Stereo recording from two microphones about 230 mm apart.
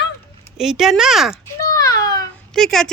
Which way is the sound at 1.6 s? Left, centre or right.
Centre.